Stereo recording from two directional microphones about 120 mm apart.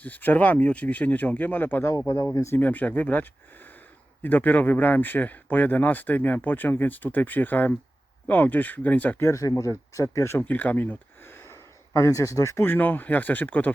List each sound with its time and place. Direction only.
0.0 s speech: 15° left (ahead or behind)
9.2 s speech: 25° left (ahead or behind)